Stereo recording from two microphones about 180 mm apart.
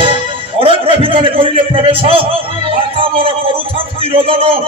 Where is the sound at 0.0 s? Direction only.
30° right (ahead or behind).